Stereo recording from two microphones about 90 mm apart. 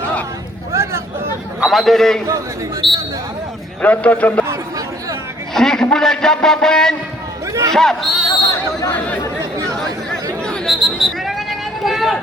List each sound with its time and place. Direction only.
0.7 s a sound: 30° right (ahead or behind)
1.6 s a man's voice: centre (ahead or behind)
3.8 s a man's voice: 15° left (ahead or behind)
5.5 s a man's voice: 5° left (ahead or behind)
9.6 s chatter: 5° left (ahead or behind)
10.7 s a sound: centre (ahead or behind)